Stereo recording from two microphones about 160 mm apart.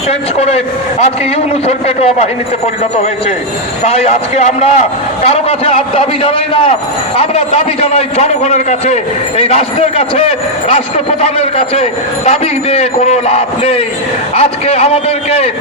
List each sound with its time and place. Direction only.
0.1 s a man's voice: 40° left (ahead or behind)
1.6 s a man's voice: 40° left (ahead or behind)
3.8 s a man's voice: 40° left (ahead or behind)